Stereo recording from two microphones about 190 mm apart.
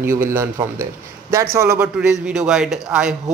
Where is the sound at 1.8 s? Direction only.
5° right (ahead or behind).